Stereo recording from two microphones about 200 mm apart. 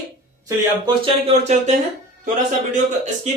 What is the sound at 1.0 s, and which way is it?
Speech, 35° right (ahead or behind).